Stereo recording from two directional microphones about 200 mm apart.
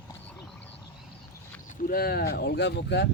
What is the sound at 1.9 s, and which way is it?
Speech, 50° left (ahead or behind).